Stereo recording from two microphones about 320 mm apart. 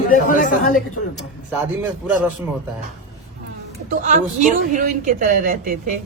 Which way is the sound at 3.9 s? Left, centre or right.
Right.